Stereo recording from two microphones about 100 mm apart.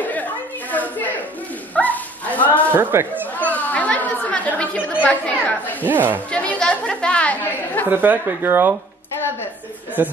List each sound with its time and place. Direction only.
0.0 s chatter: 15° left (ahead or behind)
1.8 s bow-wow: 15° left (ahead or behind)
2.7 s speech: 25° right (ahead or behind)
3.3 s chatter: 15° left (ahead or behind)
5.9 s speech: 20° right (ahead or behind)
6.3 s chatter: 10° left (ahead or behind)
7.9 s speech: 20° right (ahead or behind)
10.0 s speech: 20° right (ahead or behind)